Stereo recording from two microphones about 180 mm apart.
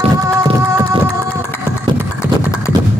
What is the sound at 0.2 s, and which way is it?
Music, 20° right (ahead or behind).